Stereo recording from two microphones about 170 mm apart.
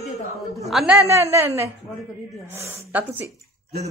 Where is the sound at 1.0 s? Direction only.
15° right (ahead or behind).